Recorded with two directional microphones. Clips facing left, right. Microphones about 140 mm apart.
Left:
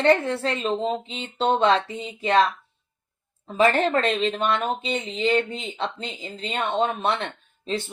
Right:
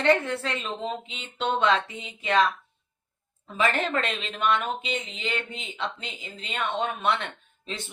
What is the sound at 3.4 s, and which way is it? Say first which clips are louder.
Speech: left 6 dB; 35° left (ahead or behind).